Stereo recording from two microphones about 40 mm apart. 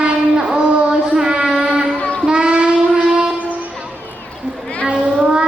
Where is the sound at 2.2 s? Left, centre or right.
Right.